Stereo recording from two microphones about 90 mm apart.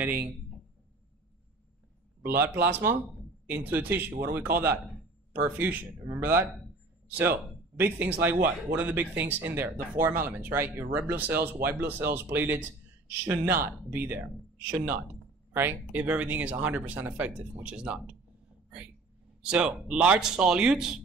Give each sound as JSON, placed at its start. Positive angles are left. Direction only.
{"t": 2.2, "sound": "speech", "side_deg": -25}
{"t": 19.4, "sound": "speech", "side_deg": -10}